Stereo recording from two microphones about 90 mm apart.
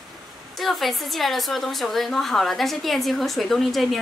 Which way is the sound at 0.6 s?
Centre (ahead or behind).